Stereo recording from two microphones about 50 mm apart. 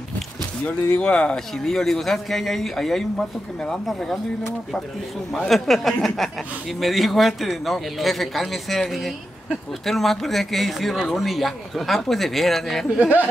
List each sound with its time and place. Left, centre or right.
0.7 s speech: left
1.1 s speech: centre
5.5 s speech: centre